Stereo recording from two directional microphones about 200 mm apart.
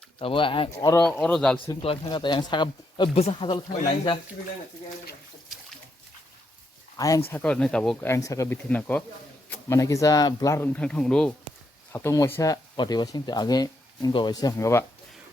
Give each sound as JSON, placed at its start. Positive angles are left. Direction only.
{"t": 0.2, "sound": "speech", "side_deg": 25}
{"t": 1.2, "sound": "speech", "side_deg": 5}
{"t": 1.8, "sound": "speech", "side_deg": 25}
{"t": 6.9, "sound": "speech", "side_deg": 20}
{"t": 7.3, "sound": "speech", "side_deg": 5}